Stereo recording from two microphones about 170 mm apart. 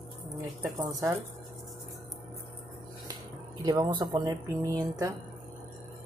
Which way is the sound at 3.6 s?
25° right (ahead or behind).